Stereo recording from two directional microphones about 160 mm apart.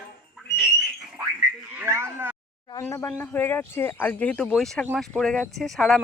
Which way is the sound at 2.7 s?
20° left (ahead or behind).